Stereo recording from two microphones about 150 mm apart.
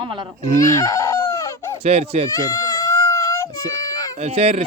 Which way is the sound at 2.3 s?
25° left (ahead or behind).